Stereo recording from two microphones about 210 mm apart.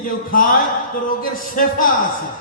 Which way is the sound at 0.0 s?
40° left (ahead or behind).